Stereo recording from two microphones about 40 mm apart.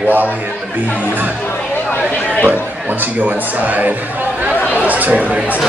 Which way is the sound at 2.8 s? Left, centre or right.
Right.